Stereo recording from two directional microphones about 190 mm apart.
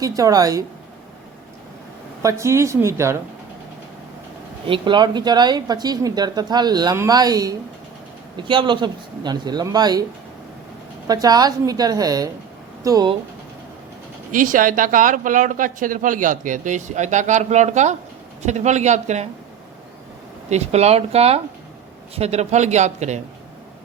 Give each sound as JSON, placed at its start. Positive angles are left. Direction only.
{"t": 0.0, "sound": "speech", "side_deg": -20}
{"t": 2.2, "sound": "speech", "side_deg": -15}
{"t": 4.6, "sound": "a woman's voice", "side_deg": -25}
{"t": 11.1, "sound": "a woman's voice", "side_deg": -20}
{"t": 14.3, "sound": "speech", "side_deg": -45}
{"t": 20.5, "sound": "speech", "side_deg": -35}